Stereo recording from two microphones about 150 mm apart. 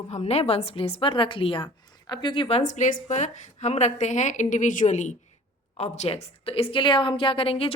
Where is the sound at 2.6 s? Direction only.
55° left (ahead or behind).